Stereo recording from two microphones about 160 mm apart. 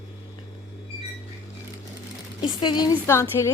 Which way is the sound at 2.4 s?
30° left (ahead or behind).